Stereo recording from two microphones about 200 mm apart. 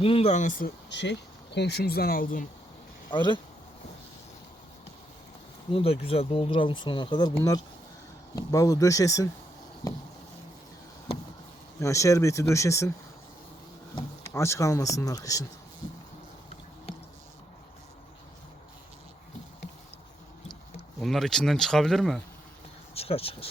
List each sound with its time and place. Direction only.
0.0 s speech: 30° left (ahead or behind)
0.9 s speech: 60° left (ahead or behind); by 2.5 s 45° left (ahead or behind)
3.1 s speech: 25° left (ahead or behind)
5.7 s speech: 30° left (ahead or behind)
11.8 s speech: 15° left (ahead or behind)
13.9 s speech: 15° left (ahead or behind)
21.0 s speech: centre (ahead or behind)
23.0 s speech: 30° left (ahead or behind)